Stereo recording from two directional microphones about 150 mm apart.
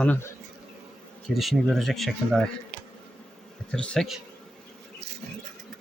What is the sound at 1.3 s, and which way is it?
Speech, centre (ahead or behind).